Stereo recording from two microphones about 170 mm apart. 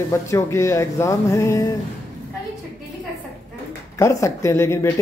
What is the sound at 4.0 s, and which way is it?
Speech, 15° left (ahead or behind).